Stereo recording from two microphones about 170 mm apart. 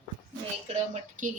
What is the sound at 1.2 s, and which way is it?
Speech, 50° right (ahead or behind).